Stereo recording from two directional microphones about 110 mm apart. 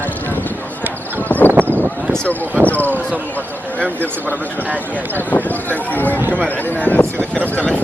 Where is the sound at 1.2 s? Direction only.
15° left (ahead or behind).